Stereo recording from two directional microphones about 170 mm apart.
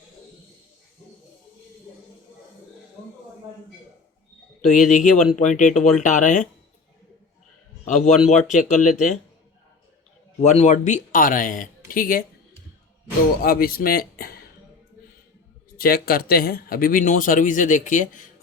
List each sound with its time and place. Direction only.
4.7 s speech: 50° left (ahead or behind)
7.9 s a man's voice: 45° left (ahead or behind)
10.4 s speech: 40° left (ahead or behind)
13.4 s speech: 60° left (ahead or behind)
15.8 s speech: 65° left (ahead or behind)